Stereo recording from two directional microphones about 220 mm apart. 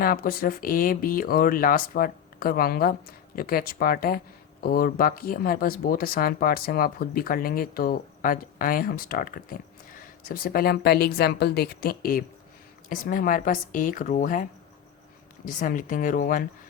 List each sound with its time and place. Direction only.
0.0 s speech: 40° left (ahead or behind)
15.4 s speech: 35° left (ahead or behind)